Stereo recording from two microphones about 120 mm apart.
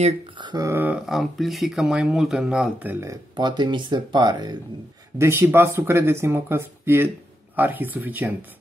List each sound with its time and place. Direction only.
0.4 s a sound: 40° right (ahead or behind)
0.7 s speech: 20° right (ahead or behind)
1.0 s speech: centre (ahead or behind)
3.1 s speech: 40° right (ahead or behind)
5.2 s speech: 20° right (ahead or behind)